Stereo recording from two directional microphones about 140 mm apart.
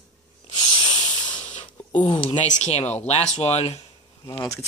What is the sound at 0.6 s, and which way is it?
Owl, 35° left (ahead or behind).